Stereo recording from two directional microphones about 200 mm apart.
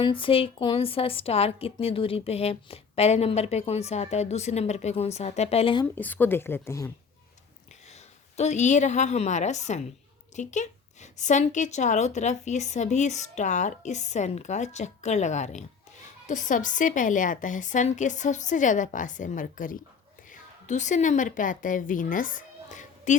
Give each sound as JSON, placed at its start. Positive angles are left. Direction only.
{"t": 0.0, "sound": "a woman's voice", "side_deg": 25}
{"t": 5.8, "sound": "a woman's voice", "side_deg": 10}
{"t": 8.4, "sound": "a woman's voice", "side_deg": 35}